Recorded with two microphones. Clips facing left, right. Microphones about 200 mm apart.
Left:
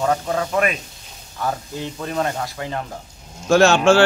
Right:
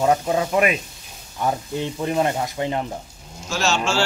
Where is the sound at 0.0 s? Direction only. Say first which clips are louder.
Right 2 dB; 20° right (ahead or behind).